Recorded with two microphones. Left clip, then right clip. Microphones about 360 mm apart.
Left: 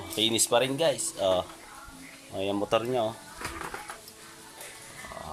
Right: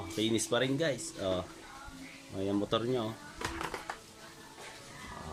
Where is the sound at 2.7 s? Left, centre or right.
Left.